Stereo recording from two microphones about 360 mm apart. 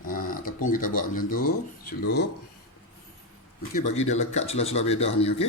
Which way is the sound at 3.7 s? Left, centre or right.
Centre.